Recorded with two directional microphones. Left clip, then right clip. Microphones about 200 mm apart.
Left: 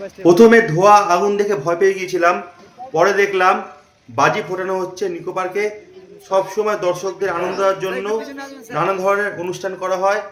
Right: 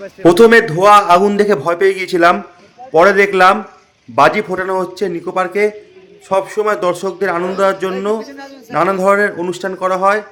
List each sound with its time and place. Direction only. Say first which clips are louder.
0.2 s a man's voice: right 2 dB; 45° right (ahead or behind)
8.3 s a man's voice: even; 20° right (ahead or behind)
8.7 s speech: right 5 dB; 35° right (ahead or behind)